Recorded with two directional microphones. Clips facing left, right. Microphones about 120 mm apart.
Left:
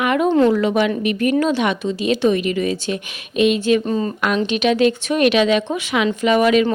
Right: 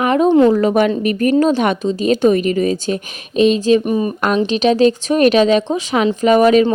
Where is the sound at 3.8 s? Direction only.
15° right (ahead or behind).